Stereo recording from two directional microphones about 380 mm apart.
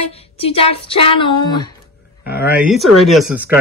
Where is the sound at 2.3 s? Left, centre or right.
Centre.